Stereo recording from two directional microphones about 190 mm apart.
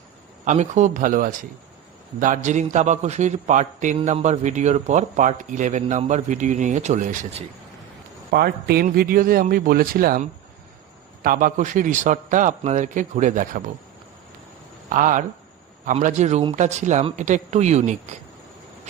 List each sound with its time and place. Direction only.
0.4 s a man's voice: 40° right (ahead or behind)
8.3 s a man's voice: 55° right (ahead or behind)
14.8 s a man's voice: 45° right (ahead or behind)